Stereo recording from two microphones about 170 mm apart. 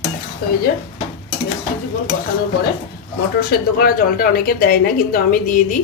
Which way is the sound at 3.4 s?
65° left (ahead or behind).